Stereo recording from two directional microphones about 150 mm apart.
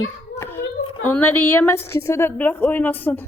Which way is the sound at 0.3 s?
15° left (ahead or behind).